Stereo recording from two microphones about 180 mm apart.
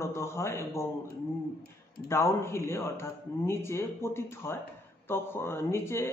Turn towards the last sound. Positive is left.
turn(degrees=15)  # may be behind; listen again after turning